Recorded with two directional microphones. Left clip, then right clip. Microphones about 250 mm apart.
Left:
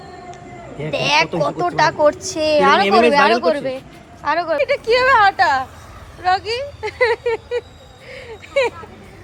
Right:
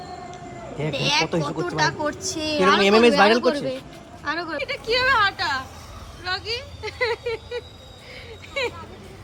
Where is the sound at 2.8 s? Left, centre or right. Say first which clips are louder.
Left 3 dB; right.